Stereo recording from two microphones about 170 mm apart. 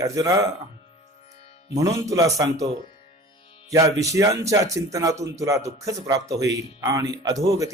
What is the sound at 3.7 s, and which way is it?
Speech, 20° right (ahead or behind).